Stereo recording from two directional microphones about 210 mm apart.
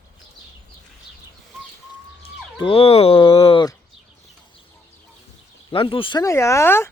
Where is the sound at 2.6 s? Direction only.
25° left (ahead or behind).